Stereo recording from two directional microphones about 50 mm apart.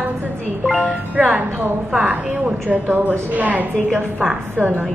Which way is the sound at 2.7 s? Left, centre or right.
Right.